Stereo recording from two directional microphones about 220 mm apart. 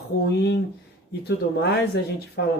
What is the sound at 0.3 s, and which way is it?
Speech, 50° left (ahead or behind).